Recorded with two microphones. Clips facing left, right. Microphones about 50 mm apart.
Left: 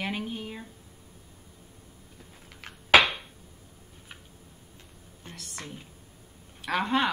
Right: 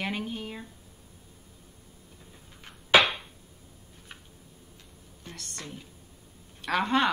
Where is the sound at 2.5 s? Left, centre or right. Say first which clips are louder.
Left 6 dB; left.